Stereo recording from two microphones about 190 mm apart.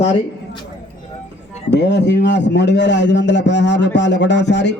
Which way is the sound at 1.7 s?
65° left (ahead or behind).